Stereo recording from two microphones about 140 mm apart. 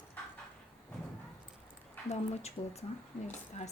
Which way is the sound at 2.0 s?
50° left (ahead or behind).